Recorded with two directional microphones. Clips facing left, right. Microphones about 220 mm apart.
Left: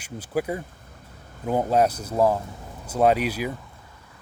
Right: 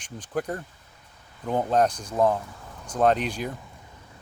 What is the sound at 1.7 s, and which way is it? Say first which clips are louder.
Speech: left 1 dB; 10° left (ahead or behind).